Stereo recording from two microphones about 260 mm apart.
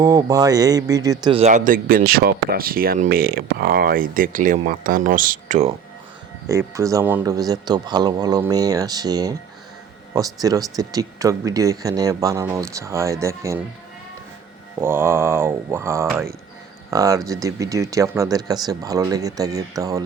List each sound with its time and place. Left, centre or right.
0.0 s speech: centre
6.5 s speech: centre
14.8 s speech: centre